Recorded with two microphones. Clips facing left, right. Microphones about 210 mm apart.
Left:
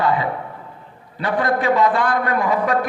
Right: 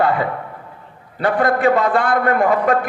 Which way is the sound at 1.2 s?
55° right (ahead or behind).